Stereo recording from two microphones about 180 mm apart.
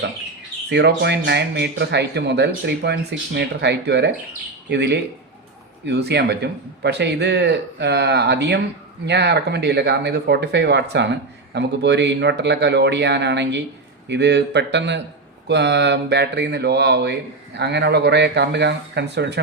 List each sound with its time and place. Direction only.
0.7 s speech: 65° right (ahead or behind)